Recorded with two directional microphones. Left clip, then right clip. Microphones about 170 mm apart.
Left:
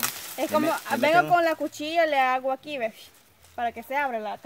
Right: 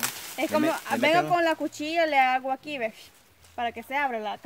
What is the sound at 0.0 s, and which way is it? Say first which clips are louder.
Speech: even; 15° left (ahead or behind).